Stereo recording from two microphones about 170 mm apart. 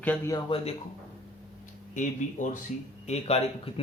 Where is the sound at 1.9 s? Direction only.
50° left (ahead or behind).